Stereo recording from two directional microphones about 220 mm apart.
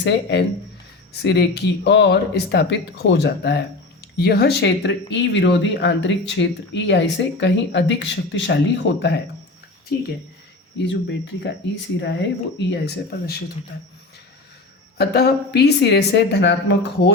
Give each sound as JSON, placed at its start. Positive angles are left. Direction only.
{"t": 0.0, "sound": "speech", "side_deg": 50}
{"t": 10.8, "sound": "speech", "side_deg": 55}
{"t": 14.9, "sound": "speech", "side_deg": 45}